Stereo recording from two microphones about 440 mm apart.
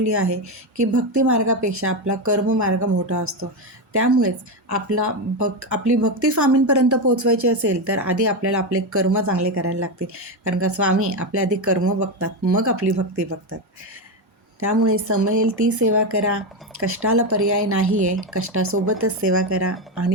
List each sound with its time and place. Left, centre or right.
0.0 s speech: right
9.4 s speech: right
14.6 s speech: right